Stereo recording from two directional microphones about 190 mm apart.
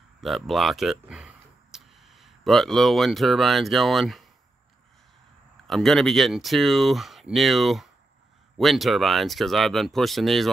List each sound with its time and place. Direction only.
0.2 s speech: centre (ahead or behind)
5.7 s speech: centre (ahead or behind)